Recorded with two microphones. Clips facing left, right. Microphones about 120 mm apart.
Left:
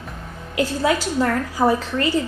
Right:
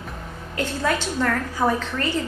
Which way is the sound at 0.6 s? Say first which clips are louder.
Left 4 dB; 10° left (ahead or behind).